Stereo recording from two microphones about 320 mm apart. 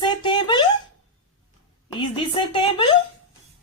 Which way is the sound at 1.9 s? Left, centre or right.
Centre.